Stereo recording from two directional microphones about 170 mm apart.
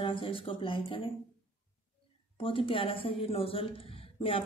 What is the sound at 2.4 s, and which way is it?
Speech, 30° left (ahead or behind).